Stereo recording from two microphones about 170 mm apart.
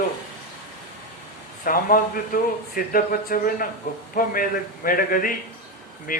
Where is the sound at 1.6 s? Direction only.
55° left (ahead or behind).